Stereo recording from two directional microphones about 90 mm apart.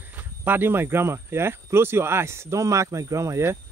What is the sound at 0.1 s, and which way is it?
Speech, 20° right (ahead or behind).